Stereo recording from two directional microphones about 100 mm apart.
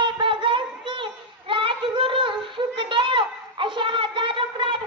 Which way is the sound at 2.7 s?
55° right (ahead or behind).